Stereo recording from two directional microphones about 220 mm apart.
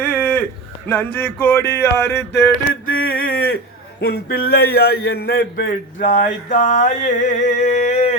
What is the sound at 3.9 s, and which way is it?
Speech, 45° left (ahead or behind).